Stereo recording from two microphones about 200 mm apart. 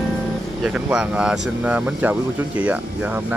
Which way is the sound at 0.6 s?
5° right (ahead or behind).